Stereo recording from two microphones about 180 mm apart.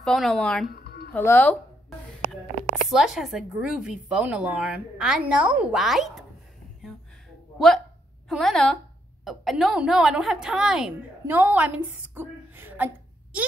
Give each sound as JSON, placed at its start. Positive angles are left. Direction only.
{"t": 0.0, "sound": "speech", "side_deg": 5}
{"t": 0.7, "sound": "a sound", "side_deg": 60}
{"t": 1.1, "sound": "speech", "side_deg": 10}
{"t": 2.7, "sound": "speech", "side_deg": -5}
{"t": 7.5, "sound": "a woman's voice", "side_deg": 0}